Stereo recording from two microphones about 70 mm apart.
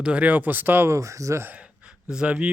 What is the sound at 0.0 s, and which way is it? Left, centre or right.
Speech, centre.